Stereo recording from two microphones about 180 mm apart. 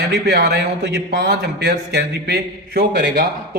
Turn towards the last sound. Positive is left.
turn(degrees=-60)  # may be behind; listen again after turning